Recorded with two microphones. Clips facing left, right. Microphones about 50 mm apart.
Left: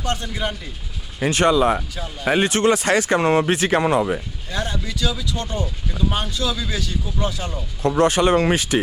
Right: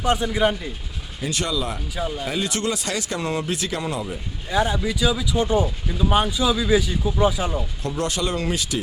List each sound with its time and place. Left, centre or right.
0.0 s speech: centre
1.2 s speech: left
2.0 s speech: centre
2.2 s speech: left
4.5 s speech: centre
7.8 s speech: left